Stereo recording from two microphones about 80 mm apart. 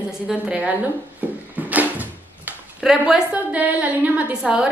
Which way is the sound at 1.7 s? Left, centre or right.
Centre.